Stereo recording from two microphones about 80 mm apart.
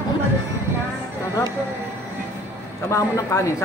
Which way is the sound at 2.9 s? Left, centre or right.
Left.